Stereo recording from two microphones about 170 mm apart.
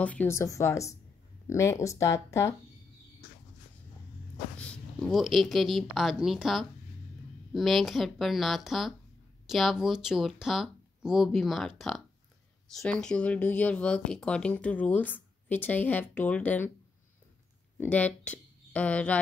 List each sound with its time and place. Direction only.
0.0 s speech: 10° left (ahead or behind)
4.6 s speech: 5° left (ahead or behind)
17.7 s speech: 10° left (ahead or behind)